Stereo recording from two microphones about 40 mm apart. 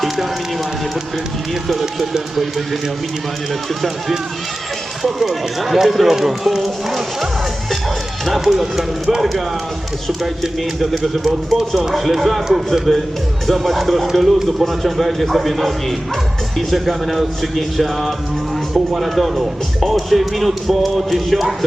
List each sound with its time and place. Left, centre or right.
1.6 s speech: centre
5.0 s speech: centre
10.1 s speech: centre